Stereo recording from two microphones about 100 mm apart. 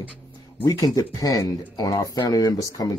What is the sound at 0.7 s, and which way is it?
Speech, 35° left (ahead or behind).